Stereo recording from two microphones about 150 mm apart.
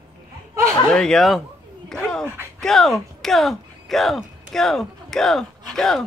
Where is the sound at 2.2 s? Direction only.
15° right (ahead or behind).